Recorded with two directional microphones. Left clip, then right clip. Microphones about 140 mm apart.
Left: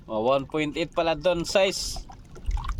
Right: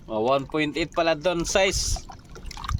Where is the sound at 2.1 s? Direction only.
35° right (ahead or behind).